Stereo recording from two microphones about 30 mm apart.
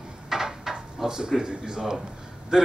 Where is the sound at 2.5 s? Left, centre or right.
Right.